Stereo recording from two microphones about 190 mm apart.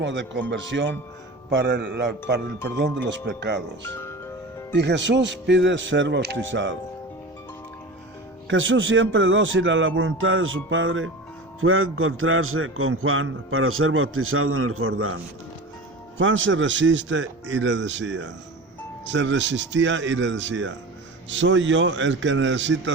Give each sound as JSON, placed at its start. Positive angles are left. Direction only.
{"t": 0.0, "sound": "speech", "side_deg": -70}
{"t": 1.5, "sound": "speech", "side_deg": -65}
{"t": 4.7, "sound": "speech", "side_deg": -65}
{"t": 8.4, "sound": "speech", "side_deg": -85}
{"t": 11.6, "sound": "a sound", "side_deg": -90}
{"t": 16.1, "sound": "speech", "side_deg": -90}